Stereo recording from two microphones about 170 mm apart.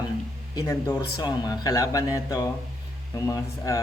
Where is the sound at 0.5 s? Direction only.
20° left (ahead or behind).